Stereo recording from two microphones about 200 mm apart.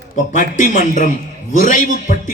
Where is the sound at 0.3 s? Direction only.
40° left (ahead or behind).